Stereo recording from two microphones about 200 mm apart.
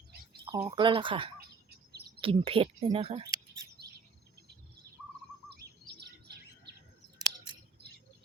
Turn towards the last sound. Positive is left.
turn(degrees=-20)  # may be behind; listen again after turning